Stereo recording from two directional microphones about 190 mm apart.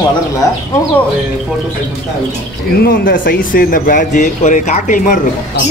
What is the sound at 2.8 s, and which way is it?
Speech, 50° left (ahead or behind).